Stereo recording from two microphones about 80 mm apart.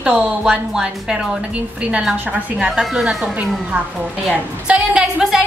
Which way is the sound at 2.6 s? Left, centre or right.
Centre.